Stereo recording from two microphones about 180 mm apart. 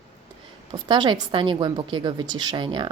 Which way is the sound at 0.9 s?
25° right (ahead or behind).